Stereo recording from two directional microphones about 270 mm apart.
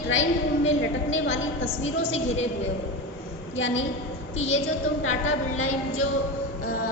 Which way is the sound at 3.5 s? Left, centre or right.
Left.